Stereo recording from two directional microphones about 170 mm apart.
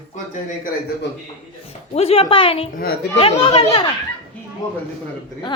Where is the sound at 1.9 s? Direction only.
35° left (ahead or behind).